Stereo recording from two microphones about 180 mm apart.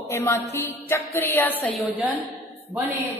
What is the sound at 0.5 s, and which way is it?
Music, 15° left (ahead or behind).